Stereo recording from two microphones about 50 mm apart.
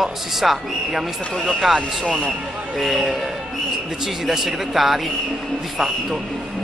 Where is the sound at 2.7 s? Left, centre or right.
Centre.